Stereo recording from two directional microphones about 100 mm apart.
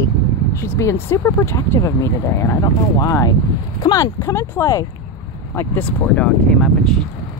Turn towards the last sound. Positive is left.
turn(degrees=10)  # may be behind; listen again after turning